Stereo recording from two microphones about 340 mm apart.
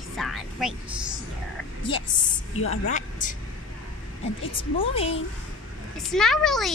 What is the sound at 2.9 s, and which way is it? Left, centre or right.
Vehicle, left.